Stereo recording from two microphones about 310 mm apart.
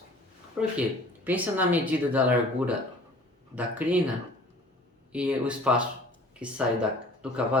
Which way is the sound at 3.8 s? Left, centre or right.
Centre.